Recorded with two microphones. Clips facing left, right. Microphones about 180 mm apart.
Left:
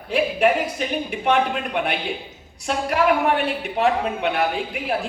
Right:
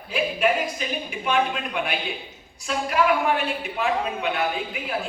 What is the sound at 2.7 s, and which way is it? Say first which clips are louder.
Speech: left 2 dB; 65° left (ahead or behind).